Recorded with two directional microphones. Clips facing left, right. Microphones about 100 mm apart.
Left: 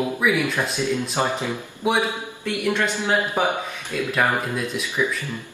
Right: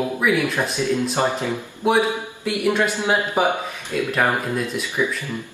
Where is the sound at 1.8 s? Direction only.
Centre (ahead or behind).